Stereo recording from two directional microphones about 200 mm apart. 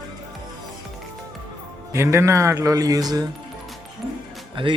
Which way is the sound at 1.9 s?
15° right (ahead or behind).